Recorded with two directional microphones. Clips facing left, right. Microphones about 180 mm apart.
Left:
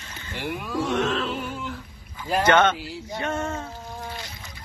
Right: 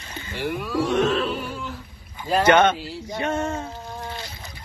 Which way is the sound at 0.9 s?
15° right (ahead or behind).